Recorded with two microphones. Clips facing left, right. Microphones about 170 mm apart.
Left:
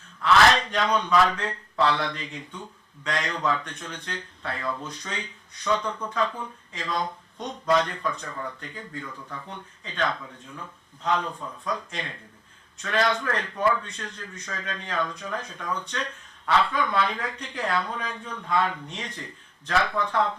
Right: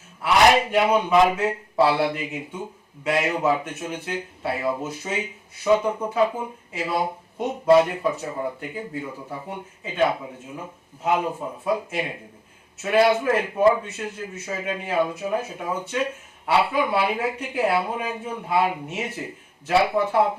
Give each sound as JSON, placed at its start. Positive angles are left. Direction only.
{"t": 0.2, "sound": "a man's voice", "side_deg": -15}
{"t": 1.1, "sound": "speech", "side_deg": -20}
{"t": 8.3, "sound": "speech", "side_deg": -25}
{"t": 8.6, "sound": "speech", "side_deg": -10}
{"t": 9.0, "sound": "speech", "side_deg": -35}
{"t": 9.5, "sound": "speech", "side_deg": -10}
{"t": 14.4, "sound": "speech", "side_deg": -10}